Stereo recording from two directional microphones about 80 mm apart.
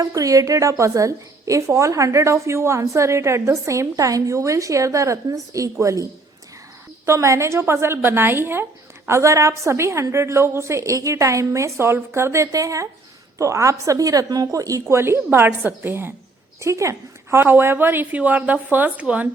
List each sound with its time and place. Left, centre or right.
0.0 s a woman's voice: right
14.9 s a woman's voice: right
16.6 s a woman's voice: right; by 19.3 s centre